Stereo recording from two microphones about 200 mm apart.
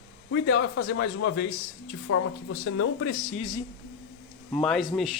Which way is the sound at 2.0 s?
90° left.